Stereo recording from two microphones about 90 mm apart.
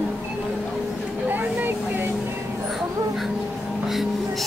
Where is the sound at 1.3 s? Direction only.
20° right (ahead or behind).